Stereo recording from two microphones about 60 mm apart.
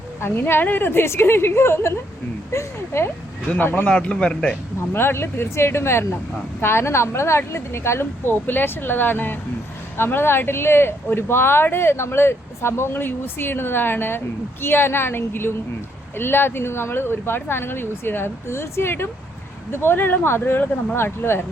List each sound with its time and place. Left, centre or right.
0.2 s speech: left
3.6 s speech: left
3.8 s a man's voice: centre
4.9 s speech: left